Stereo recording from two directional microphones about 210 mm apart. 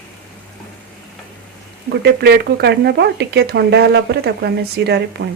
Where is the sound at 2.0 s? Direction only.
50° right (ahead or behind).